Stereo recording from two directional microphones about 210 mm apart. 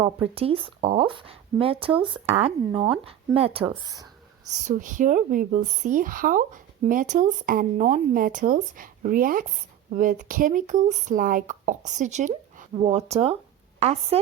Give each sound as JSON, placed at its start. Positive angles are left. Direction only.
{"t": 0.3, "sound": "speech", "side_deg": -25}
{"t": 4.5, "sound": "speech", "side_deg": -35}